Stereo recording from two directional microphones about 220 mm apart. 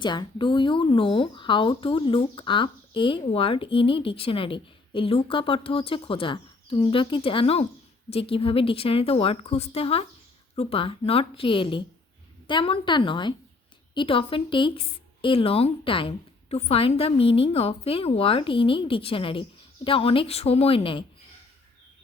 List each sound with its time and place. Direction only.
0.0 s speech: 20° left (ahead or behind)